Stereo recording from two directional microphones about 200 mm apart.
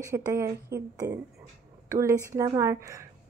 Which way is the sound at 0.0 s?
15° right (ahead or behind).